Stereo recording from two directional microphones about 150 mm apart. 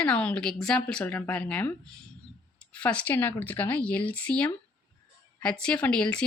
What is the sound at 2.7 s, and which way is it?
Speech, 10° left (ahead or behind).